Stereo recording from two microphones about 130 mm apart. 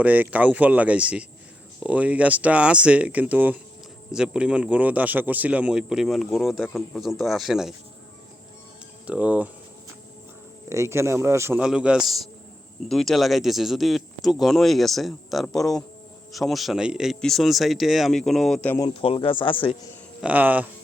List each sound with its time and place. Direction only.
0.0 s speech: 10° right (ahead or behind)
9.0 s speech: 10° right (ahead or behind)
10.7 s a man's voice: 20° right (ahead or behind)
11.6 s speech: 5° right (ahead or behind)
18.9 s speech: 45° left (ahead or behind)
20.2 s speech: 10° right (ahead or behind)